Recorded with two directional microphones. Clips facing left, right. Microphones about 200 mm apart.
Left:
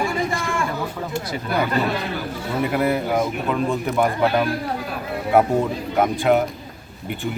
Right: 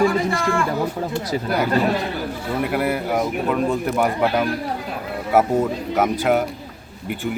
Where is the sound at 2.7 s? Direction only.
5° right (ahead or behind).